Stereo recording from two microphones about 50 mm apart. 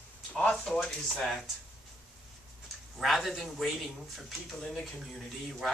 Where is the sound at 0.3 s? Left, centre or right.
Left.